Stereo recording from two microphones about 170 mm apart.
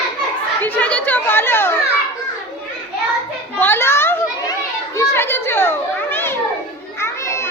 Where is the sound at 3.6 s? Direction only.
15° left (ahead or behind).